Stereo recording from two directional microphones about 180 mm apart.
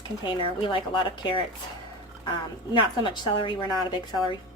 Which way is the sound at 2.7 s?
25° left (ahead or behind).